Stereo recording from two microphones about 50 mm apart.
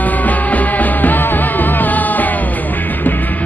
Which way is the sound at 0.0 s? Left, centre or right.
Left.